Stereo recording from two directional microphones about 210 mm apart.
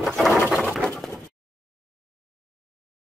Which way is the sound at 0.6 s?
Centre (ahead or behind).